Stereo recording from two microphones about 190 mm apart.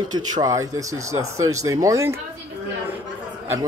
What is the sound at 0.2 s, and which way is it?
Speech, 20° right (ahead or behind).